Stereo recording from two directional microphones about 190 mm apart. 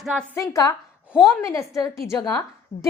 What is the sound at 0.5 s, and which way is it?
A woman's voice, 15° left (ahead or behind).